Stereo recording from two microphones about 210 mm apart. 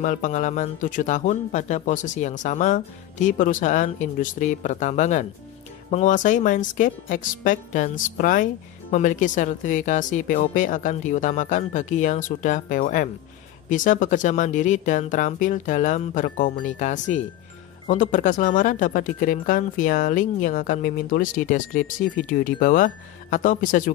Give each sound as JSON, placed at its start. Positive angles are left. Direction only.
{"t": 0.0, "sound": "speech", "side_deg": 35}